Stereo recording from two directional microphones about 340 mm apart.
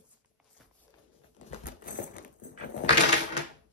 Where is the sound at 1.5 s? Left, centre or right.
Left.